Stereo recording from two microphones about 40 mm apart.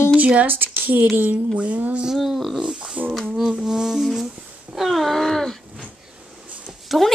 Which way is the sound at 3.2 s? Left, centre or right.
Centre.